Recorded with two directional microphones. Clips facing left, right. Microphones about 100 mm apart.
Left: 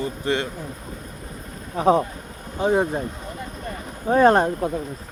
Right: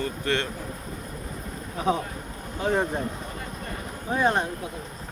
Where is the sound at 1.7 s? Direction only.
35° left (ahead or behind).